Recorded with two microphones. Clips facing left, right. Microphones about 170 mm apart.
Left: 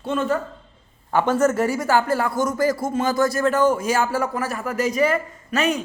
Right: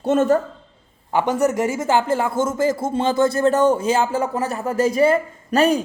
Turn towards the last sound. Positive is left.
turn(degrees=-35)  # may be behind; listen again after turning